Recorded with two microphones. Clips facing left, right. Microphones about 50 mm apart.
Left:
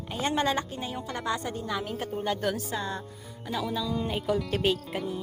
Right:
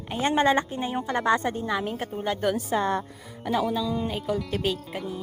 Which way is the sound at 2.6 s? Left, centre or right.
Right.